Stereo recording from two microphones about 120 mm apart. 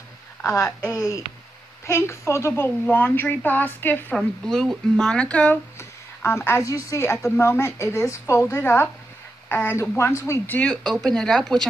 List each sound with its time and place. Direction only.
0.4 s a woman's voice: 25° left (ahead or behind); by 11.6 s 5° left (ahead or behind)